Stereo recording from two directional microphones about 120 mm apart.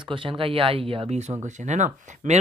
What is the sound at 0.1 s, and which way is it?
Speech, 45° right (ahead or behind).